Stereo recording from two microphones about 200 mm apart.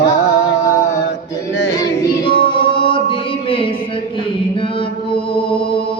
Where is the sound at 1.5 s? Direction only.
60° left (ahead or behind).